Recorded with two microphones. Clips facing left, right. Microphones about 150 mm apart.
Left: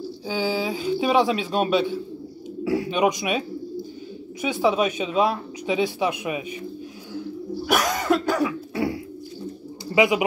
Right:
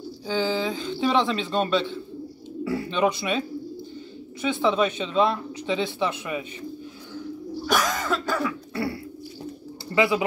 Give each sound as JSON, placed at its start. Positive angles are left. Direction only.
{"t": 0.3, "sound": "speech", "side_deg": 10}
{"t": 7.6, "sound": "throat clearing", "side_deg": 10}
{"t": 9.9, "sound": "speech", "side_deg": 15}